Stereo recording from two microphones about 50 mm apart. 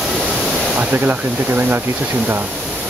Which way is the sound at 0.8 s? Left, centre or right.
Right.